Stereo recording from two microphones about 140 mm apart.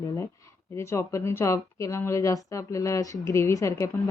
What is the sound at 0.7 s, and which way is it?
Speech, 20° left (ahead or behind).